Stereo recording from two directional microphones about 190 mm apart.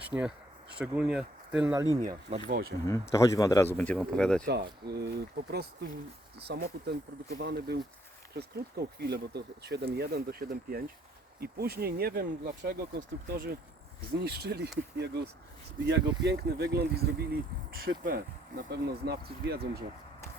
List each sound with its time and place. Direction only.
0.0 s speech: 5° right (ahead or behind)
2.5 s speech: 55° right (ahead or behind)
2.8 s speech: 15° left (ahead or behind)
4.4 s speech: 60° right (ahead or behind)